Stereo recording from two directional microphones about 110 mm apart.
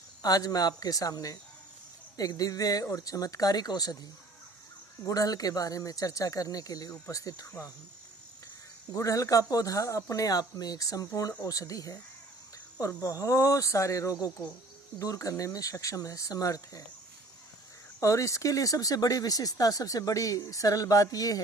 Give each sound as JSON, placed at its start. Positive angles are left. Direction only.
{"t": 0.2, "sound": "speech", "side_deg": 35}
{"t": 5.0, "sound": "speech", "side_deg": 35}
{"t": 8.9, "sound": "speech", "side_deg": 30}
{"t": 13.0, "sound": "speech", "side_deg": 30}
{"t": 18.0, "sound": "speech", "side_deg": 30}